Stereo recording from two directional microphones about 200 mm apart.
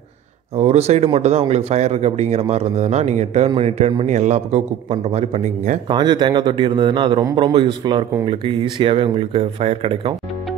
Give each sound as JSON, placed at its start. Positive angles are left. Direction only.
{"t": 0.6, "sound": "speech", "side_deg": -30}
{"t": 5.9, "sound": "a man's voice", "side_deg": -20}